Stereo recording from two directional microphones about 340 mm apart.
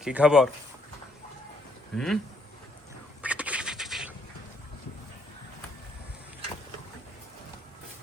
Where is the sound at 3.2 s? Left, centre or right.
Centre.